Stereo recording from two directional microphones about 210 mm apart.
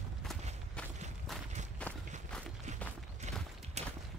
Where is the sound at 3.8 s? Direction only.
30° right (ahead or behind).